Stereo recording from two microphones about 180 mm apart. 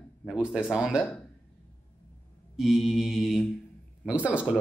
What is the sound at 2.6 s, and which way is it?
Speech, centre (ahead or behind).